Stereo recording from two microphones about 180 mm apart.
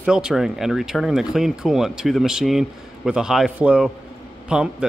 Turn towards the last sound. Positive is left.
turn(degrees=-5)  # may be behind; listen again after turning